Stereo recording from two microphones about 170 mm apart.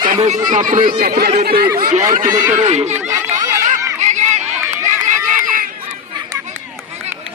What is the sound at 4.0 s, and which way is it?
Run, 45° right (ahead or behind).